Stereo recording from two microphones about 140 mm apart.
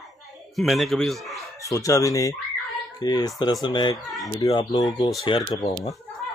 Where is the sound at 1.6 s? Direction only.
25° left (ahead or behind).